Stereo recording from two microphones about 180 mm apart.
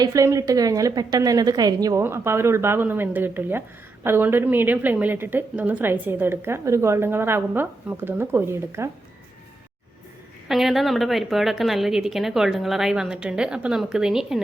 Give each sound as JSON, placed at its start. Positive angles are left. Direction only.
{"t": 0.0, "sound": "a woman's voice", "side_deg": -20}
{"t": 10.5, "sound": "a woman's voice", "side_deg": 0}